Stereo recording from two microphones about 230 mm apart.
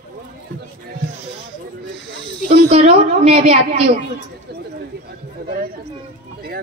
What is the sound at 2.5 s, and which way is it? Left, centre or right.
A woman's voice, right.